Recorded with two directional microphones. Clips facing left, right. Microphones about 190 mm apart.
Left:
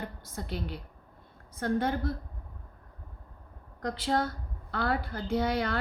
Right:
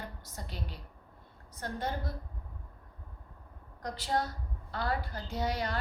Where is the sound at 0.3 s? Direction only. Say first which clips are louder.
Left 8 dB; 60° left (ahead or behind).